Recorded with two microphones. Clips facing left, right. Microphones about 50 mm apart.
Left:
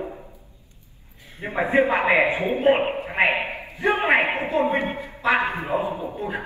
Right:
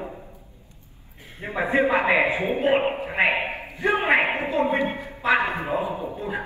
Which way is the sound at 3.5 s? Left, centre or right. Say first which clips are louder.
Even; right.